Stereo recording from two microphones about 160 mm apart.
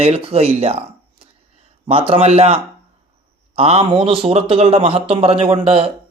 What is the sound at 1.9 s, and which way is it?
A man's voice, 35° right (ahead or behind).